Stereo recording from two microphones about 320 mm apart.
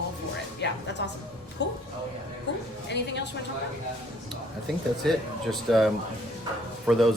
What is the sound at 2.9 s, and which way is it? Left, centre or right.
Speech, left.